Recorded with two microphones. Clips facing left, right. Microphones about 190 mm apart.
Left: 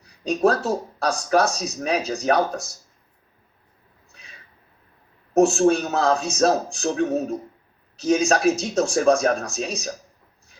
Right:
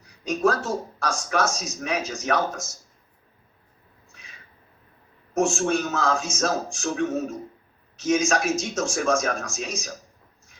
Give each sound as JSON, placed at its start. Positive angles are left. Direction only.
{"t": 0.0, "sound": "a man's voice", "side_deg": 35}
{"t": 5.3, "sound": "a man's voice", "side_deg": 35}